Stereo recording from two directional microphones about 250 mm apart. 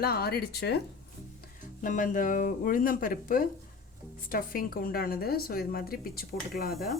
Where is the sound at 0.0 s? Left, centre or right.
Left.